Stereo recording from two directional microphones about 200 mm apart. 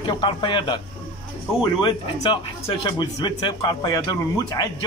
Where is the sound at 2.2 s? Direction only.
20° left (ahead or behind).